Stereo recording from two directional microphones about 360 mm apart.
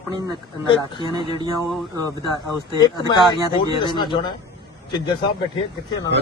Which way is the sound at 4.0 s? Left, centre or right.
Centre.